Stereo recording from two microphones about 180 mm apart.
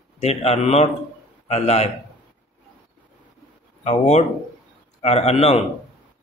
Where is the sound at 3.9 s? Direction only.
40° left (ahead or behind).